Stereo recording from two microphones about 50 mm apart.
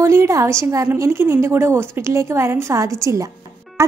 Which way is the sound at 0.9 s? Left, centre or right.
Right.